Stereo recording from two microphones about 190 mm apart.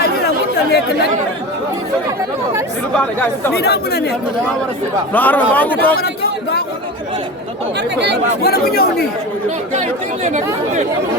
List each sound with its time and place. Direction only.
3.5 s speech: 60° left (ahead or behind)
5.1 s a man's voice: 10° left (ahead or behind)
7.9 s speech: 65° right (ahead or behind)
8.4 s speech: 55° left (ahead or behind)
9.7 s speech: 40° right (ahead or behind)